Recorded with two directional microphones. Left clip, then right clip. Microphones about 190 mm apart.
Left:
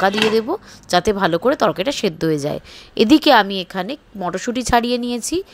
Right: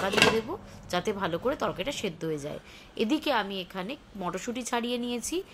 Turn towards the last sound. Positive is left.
turn(degrees=35)  # may be behind; listen again after turning